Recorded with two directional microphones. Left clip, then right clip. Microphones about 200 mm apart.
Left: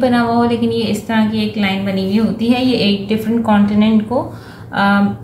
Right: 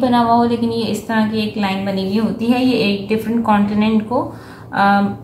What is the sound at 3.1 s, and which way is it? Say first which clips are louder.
A woman's voice: even; centre (ahead or behind).